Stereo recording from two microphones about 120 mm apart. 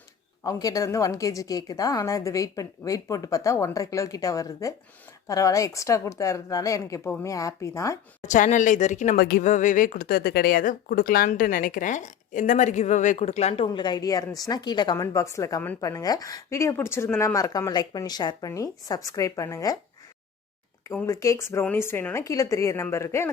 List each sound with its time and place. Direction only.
0.4 s a woman's voice: 30° left (ahead or behind)
8.2 s a woman's voice: 90° left; by 14.9 s 35° left (ahead or behind)
14.9 s a woman's voice: 25° left (ahead or behind)
21.1 s a woman's voice: 25° left (ahead or behind)